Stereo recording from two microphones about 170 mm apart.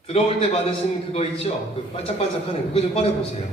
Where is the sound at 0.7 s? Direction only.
35° left (ahead or behind).